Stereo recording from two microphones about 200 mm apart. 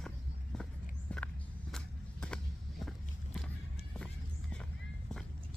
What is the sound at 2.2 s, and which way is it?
Vehicle, 5° left (ahead or behind).